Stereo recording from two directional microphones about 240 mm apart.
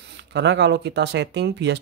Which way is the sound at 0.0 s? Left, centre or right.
Right.